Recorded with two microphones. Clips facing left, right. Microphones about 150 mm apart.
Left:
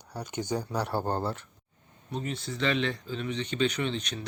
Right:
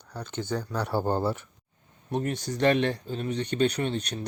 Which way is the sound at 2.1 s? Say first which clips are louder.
Right 5 dB; 50° right (ahead or behind).